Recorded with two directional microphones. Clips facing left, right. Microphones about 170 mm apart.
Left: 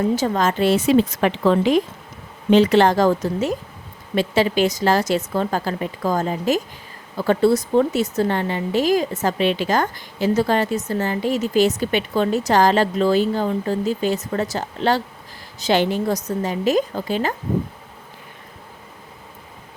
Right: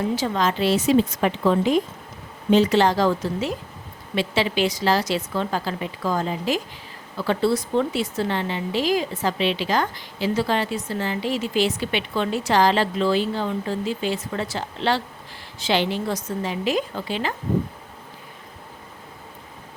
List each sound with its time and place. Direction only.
0.2 s a woman's voice: 45° left (ahead or behind); by 1.8 s 85° left
2.5 s speech: 60° left (ahead or behind); by 17.3 s 45° left (ahead or behind)